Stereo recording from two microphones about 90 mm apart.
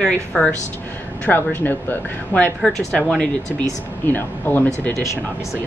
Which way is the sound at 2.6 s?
5° left (ahead or behind).